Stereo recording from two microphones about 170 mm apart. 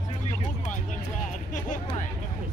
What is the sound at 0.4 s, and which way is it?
Music, 45° left (ahead or behind).